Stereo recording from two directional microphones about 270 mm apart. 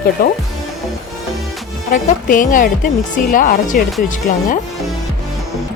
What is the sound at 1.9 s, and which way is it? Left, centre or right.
Speech, left.